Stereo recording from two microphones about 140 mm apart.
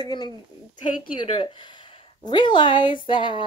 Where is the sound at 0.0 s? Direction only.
30° left (ahead or behind).